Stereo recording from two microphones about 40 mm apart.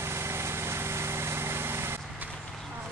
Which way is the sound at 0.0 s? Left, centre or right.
Right.